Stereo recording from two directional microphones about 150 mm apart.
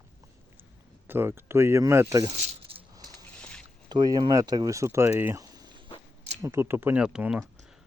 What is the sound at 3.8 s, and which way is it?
Speech, 30° right (ahead or behind).